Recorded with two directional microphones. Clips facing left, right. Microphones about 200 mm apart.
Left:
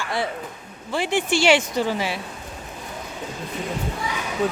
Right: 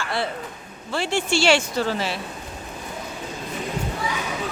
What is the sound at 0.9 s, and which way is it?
Speech, 15° left (ahead or behind).